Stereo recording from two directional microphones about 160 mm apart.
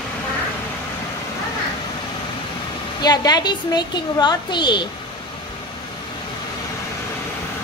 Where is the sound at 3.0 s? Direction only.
25° left (ahead or behind).